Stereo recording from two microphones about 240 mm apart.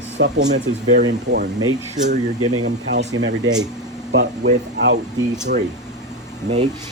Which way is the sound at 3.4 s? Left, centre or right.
Centre.